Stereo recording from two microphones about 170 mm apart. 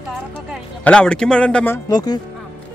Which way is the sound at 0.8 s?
5° left (ahead or behind).